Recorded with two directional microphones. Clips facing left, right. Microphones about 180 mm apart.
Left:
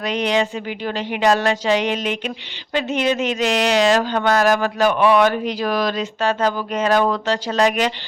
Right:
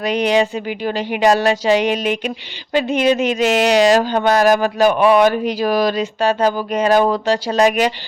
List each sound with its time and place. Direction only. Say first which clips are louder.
0.1 s speech: right 4 dB; 15° right (ahead or behind)